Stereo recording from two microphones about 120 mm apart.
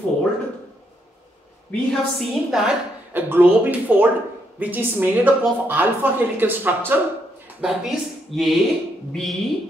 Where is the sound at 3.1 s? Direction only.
15° right (ahead or behind).